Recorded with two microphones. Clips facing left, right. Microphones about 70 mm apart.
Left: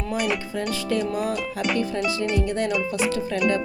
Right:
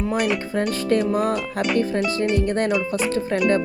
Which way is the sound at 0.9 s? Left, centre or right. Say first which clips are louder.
Right 5 dB; right.